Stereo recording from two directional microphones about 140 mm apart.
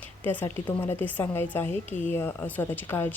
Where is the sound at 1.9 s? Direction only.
60° left (ahead or behind).